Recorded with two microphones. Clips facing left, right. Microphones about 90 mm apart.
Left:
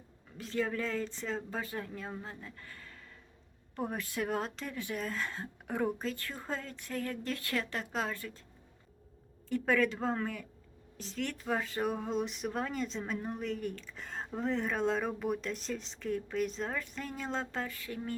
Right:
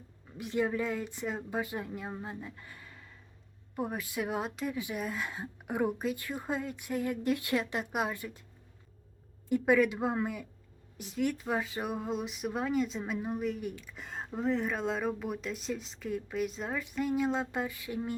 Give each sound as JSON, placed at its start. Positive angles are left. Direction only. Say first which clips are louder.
{"t": 0.3, "sound": "a woman's voice", "louder": "right 3 dB", "side_deg": -15}
{"t": 9.5, "sound": "a woman's voice", "louder": "right 4 dB", "side_deg": -15}